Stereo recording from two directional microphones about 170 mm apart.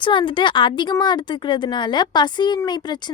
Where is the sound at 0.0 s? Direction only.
30° left (ahead or behind).